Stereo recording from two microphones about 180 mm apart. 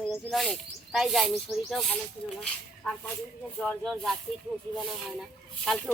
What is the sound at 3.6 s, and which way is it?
Speech, centre (ahead or behind).